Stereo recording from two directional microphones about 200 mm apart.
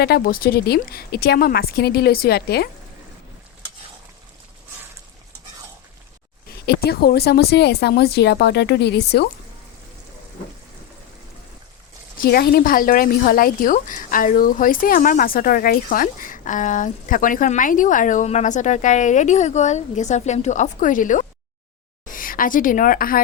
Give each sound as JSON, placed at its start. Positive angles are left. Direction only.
{"t": 0.0, "sound": "speech", "side_deg": 50}
{"t": 6.7, "sound": "speech", "side_deg": 50}
{"t": 12.1, "sound": "a woman's voice", "side_deg": 50}